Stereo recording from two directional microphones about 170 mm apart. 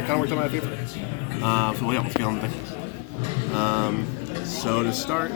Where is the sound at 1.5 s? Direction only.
20° left (ahead or behind).